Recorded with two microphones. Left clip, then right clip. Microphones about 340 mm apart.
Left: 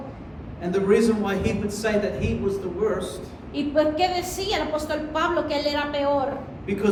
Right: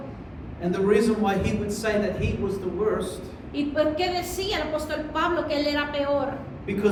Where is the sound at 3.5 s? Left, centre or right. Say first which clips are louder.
Left 2 dB; left.